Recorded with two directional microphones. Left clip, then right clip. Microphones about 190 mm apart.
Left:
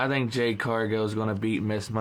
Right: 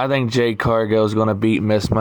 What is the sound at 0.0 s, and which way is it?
Speech, 45° right (ahead or behind).